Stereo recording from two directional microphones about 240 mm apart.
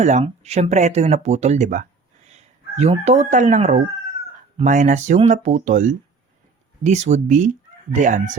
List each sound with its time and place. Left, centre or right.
0.0 s speech: right
2.3 s a sound: right
3.0 s speech: right